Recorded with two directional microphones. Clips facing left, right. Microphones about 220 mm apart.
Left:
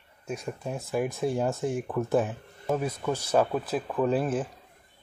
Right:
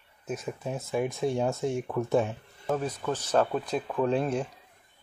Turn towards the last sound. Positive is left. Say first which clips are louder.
# left 1 dB
turn(degrees=5)  # may be behind; listen again after turning